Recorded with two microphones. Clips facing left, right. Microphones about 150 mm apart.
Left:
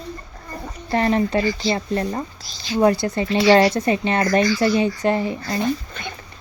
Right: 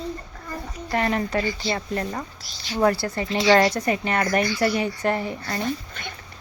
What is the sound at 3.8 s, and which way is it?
Speech, 25° left (ahead or behind).